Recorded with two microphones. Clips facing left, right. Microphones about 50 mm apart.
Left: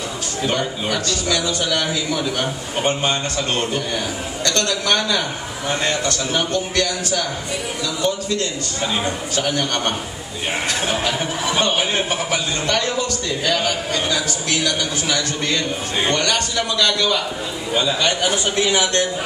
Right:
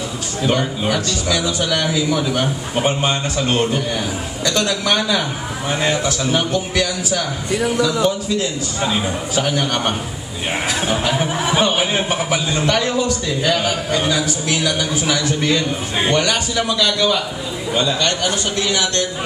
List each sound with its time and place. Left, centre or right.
0.4 s a man's voice: centre
17.7 s a man's voice: centre; by 19.0 s left